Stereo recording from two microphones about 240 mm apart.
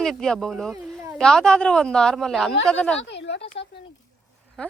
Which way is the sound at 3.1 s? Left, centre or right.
Left.